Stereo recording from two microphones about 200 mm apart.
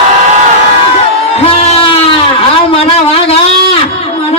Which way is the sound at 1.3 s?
30° left (ahead or behind).